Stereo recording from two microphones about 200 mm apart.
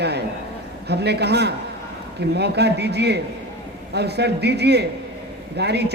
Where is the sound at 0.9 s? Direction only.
55° right (ahead or behind).